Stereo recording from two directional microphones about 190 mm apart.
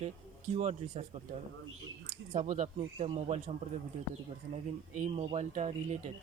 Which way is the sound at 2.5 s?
40° right (ahead or behind).